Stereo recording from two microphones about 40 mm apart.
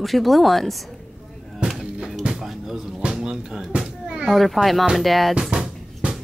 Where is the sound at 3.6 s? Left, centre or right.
Centre.